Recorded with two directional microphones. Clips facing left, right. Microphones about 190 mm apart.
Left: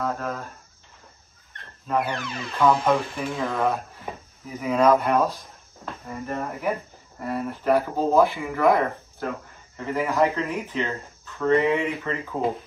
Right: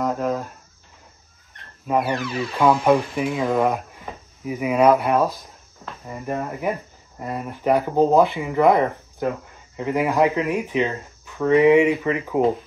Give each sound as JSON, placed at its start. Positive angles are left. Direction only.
{"t": 0.0, "sound": "speech", "side_deg": -15}
{"t": 1.9, "sound": "speech", "side_deg": -10}
{"t": 6.2, "sound": "speech", "side_deg": -15}